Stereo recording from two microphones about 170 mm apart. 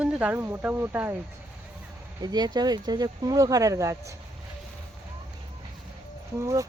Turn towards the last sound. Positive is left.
turn(degrees=-20)  # may be behind; listen again after turning